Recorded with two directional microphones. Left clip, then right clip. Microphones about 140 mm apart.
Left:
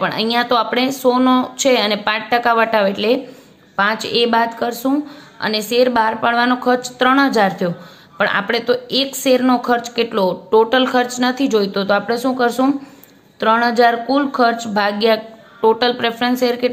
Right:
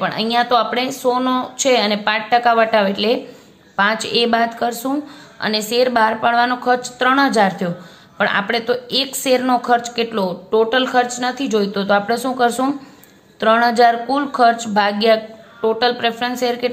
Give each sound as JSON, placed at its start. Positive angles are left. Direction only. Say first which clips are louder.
{"t": 0.0, "sound": "a woman's voice", "louder": "even", "side_deg": 25}